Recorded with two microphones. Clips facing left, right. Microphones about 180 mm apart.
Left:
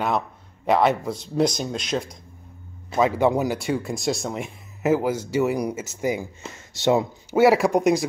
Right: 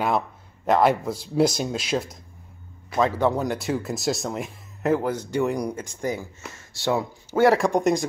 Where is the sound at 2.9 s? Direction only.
10° left (ahead or behind).